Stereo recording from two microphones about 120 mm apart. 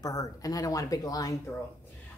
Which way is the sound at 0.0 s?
30° left (ahead or behind).